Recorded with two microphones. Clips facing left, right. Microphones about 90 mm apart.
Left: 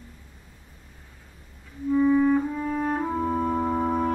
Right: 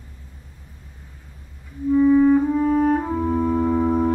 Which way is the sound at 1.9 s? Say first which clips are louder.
Right 5 dB; centre (ahead or behind).